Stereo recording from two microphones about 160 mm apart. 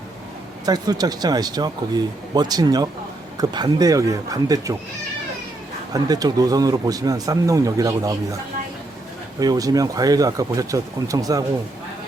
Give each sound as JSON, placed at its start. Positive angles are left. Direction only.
{"t": 0.6, "sound": "speech", "side_deg": -25}
{"t": 5.9, "sound": "speech", "side_deg": -25}
{"t": 9.4, "sound": "speech", "side_deg": -25}